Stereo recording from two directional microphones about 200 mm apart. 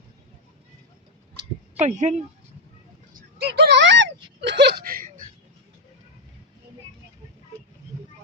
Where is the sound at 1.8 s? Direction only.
35° right (ahead or behind).